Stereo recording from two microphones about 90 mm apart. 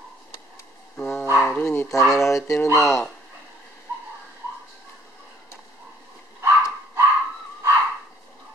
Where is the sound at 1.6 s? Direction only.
20° left (ahead or behind).